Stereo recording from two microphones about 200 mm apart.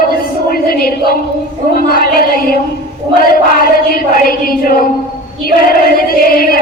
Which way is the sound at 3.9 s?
45° left (ahead or behind).